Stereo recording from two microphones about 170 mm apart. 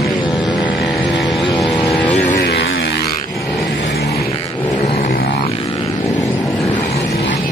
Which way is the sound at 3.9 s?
65° left (ahead or behind).